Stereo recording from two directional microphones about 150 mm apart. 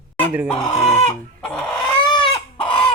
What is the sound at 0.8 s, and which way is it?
Chicken, 40° left (ahead or behind).